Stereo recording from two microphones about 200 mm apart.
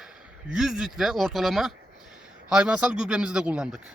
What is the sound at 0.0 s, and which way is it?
Speech, 5° right (ahead or behind).